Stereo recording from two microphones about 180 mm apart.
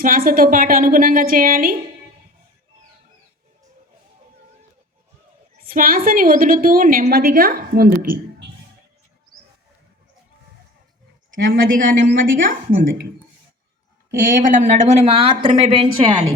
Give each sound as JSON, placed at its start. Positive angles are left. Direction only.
{"t": 0.0, "sound": "a woman's voice", "side_deg": -50}
{"t": 5.5, "sound": "a woman's voice", "side_deg": -55}
{"t": 11.3, "sound": "a woman's voice", "side_deg": -50}
{"t": 14.2, "sound": "a woman's voice", "side_deg": -50}